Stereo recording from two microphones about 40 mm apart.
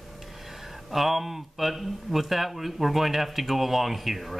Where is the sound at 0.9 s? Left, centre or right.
Centre.